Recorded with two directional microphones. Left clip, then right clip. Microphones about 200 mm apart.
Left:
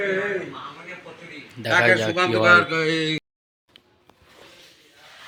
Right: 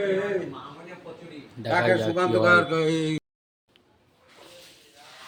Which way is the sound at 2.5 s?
50° right (ahead or behind).